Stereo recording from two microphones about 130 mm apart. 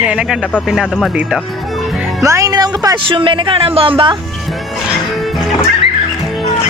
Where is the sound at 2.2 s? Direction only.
25° right (ahead or behind).